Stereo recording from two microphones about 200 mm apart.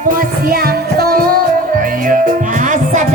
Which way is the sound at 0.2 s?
45° right (ahead or behind).